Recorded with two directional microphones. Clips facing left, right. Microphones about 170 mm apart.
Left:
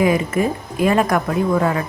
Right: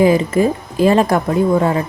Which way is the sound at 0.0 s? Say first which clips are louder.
Right 4 dB; 30° right (ahead or behind).